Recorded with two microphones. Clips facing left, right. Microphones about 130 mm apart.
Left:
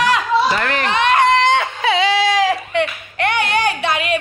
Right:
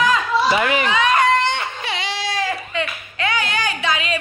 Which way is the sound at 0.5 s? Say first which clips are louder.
Right 1 dB; 5° right (ahead or behind).